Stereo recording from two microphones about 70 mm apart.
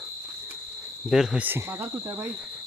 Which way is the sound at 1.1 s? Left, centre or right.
Centre.